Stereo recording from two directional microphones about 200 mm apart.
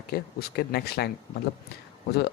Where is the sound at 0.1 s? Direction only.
50° left (ahead or behind).